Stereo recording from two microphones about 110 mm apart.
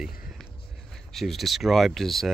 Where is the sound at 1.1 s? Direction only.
Centre (ahead or behind).